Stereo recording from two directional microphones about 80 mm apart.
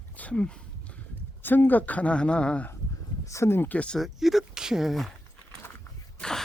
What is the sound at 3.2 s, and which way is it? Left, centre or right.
Speech, left.